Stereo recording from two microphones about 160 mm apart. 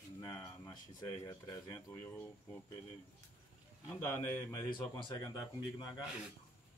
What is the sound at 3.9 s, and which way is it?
Speech, 15° left (ahead or behind).